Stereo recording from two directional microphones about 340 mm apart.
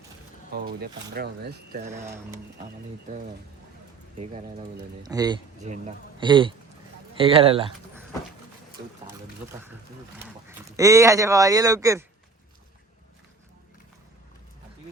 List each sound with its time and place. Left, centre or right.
0.5 s speech: right
2.0 s speech: centre
4.2 s speech: centre
10.7 s speech: centre